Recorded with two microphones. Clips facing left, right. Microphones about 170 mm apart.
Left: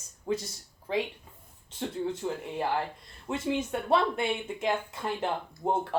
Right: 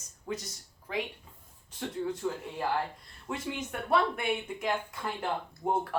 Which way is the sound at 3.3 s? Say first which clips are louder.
Left 6 dB; 25° left (ahead or behind).